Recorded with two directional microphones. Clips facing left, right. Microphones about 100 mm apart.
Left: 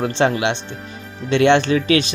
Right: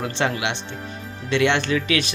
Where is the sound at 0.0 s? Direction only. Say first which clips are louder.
Left 6 dB; 30° left (ahead or behind).